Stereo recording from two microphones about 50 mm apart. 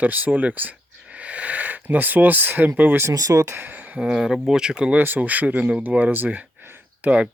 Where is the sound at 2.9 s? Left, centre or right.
Right.